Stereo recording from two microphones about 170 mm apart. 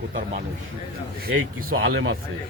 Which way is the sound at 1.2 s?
60° right (ahead or behind).